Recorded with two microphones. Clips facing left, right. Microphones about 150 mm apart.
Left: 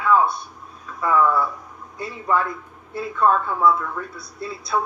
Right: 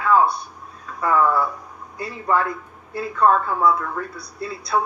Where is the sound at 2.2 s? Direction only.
25° right (ahead or behind).